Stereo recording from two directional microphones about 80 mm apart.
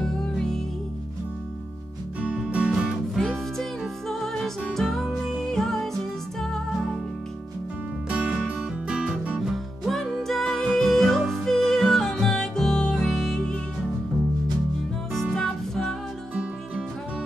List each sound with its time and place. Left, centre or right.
2.2 s music: centre
3.2 s music: centre
8.1 s music: centre
15.4 s music: centre